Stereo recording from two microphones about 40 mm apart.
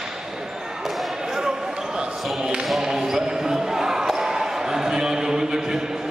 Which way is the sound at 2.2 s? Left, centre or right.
Centre.